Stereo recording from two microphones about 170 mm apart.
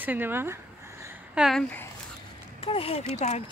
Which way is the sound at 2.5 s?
35° left (ahead or behind).